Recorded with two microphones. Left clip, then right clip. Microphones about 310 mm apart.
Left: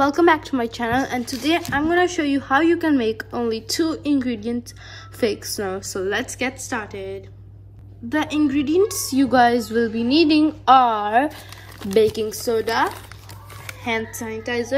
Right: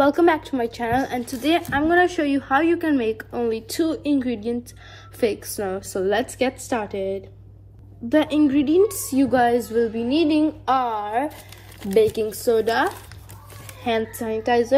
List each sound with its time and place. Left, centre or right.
0.0 s a woman's voice: centre